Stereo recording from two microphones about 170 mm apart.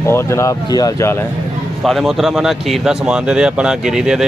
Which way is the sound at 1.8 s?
Centre (ahead or behind).